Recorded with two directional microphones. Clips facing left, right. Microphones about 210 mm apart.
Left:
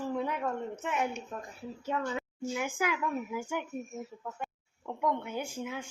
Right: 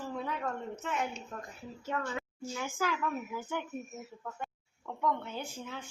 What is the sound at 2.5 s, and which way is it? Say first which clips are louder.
A woman's voice: left 2 dB; 15° left (ahead or behind).